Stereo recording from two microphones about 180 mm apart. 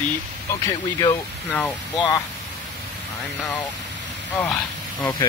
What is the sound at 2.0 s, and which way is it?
Speech, 20° left (ahead or behind).